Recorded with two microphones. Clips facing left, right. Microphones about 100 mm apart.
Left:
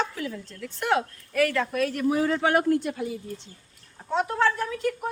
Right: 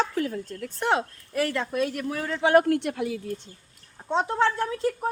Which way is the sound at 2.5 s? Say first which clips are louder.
Right 3 dB; 60° right (ahead or behind).